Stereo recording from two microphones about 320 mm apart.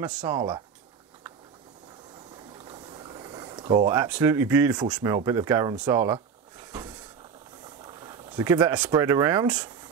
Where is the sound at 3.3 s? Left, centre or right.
Centre.